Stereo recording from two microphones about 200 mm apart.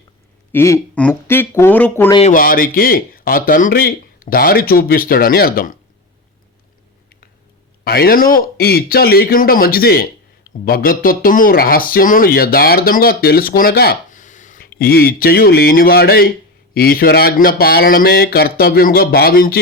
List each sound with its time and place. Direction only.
0.5 s speech: 10° left (ahead or behind)
2.3 s speech: 45° left (ahead or behind)
7.9 s speech: 50° left (ahead or behind)